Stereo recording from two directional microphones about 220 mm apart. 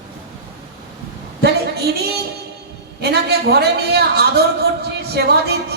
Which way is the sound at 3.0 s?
45° right (ahead or behind).